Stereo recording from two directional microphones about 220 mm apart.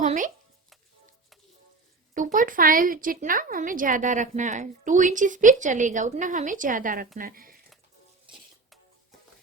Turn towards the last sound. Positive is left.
turn(degrees=-40)  # may be behind; listen again after turning